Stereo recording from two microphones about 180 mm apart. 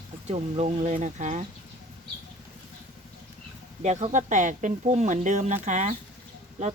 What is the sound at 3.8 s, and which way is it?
Speech, 40° right (ahead or behind).